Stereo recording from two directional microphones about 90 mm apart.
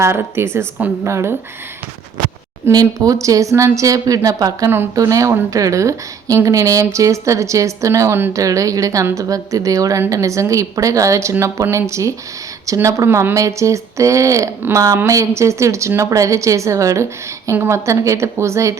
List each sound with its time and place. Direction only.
0.0 s a woman's voice: 30° right (ahead or behind)
2.7 s a woman's voice: 40° right (ahead or behind)